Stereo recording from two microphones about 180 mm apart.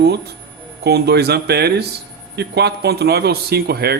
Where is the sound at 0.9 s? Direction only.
65° right (ahead or behind).